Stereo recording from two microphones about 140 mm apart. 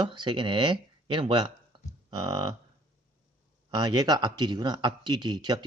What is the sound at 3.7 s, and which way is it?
Speech, 30° right (ahead or behind).